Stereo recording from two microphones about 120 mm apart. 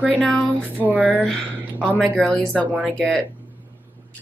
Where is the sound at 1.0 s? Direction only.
10° left (ahead or behind).